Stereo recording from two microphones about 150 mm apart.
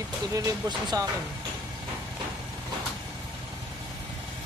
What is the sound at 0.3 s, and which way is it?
Speech, 25° right (ahead or behind).